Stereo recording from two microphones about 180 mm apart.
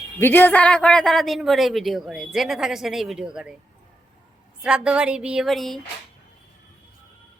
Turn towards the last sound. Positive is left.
turn(degrees=0)  # may be behind; listen again after turning